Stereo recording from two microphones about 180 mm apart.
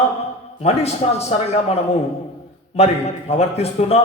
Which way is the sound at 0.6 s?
35° left (ahead or behind).